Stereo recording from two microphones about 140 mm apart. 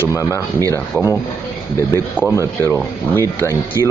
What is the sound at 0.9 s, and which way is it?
Speech, 20° right (ahead or behind).